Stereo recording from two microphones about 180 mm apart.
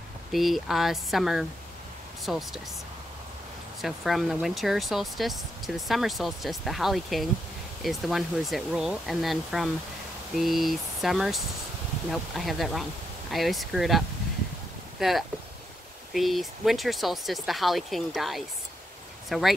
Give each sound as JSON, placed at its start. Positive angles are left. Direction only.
{"t": 0.3, "sound": "speech", "side_deg": 0}
{"t": 3.8, "sound": "speech", "side_deg": 0}